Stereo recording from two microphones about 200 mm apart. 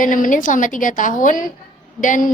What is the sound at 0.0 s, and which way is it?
A woman's voice, 40° left (ahead or behind).